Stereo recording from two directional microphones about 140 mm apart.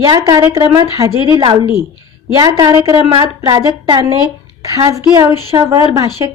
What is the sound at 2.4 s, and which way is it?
A woman's voice, 30° right (ahead or behind).